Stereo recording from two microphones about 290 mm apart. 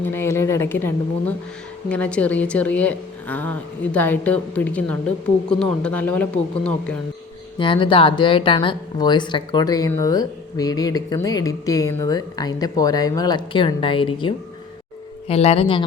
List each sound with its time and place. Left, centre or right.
0.0 s a woman's voice: centre
7.6 s a woman's voice: centre